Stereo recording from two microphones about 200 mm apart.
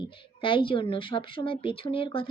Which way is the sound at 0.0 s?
25° left (ahead or behind).